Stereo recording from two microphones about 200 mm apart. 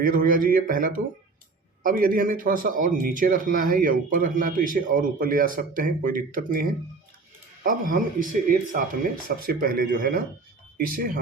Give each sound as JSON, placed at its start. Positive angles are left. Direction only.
{"t": 0.0, "sound": "a man's voice", "side_deg": -45}